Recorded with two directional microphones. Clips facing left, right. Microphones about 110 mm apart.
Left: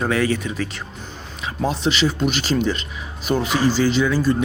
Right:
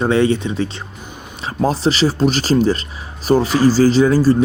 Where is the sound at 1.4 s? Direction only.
35° right (ahead or behind).